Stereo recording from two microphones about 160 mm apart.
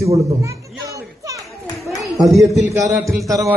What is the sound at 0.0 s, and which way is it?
Children playing, 20° right (ahead or behind).